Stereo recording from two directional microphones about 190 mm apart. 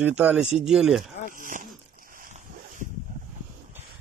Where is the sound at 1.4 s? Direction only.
45° right (ahead or behind).